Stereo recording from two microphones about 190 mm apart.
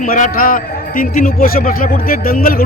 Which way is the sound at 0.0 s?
45° left (ahead or behind).